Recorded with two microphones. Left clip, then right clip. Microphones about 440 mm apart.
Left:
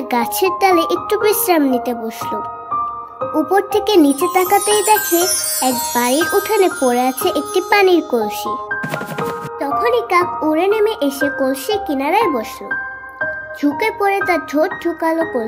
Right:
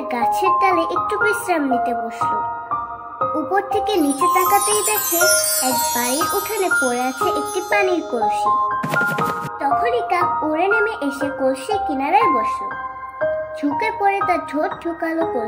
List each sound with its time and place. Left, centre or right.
0.1 s speech: left
3.4 s speech: left
4.0 s music: centre
7.2 s speech: left
9.6 s speech: left
13.6 s speech: left